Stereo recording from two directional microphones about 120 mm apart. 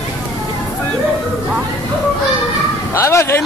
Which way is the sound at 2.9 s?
25° left (ahead or behind).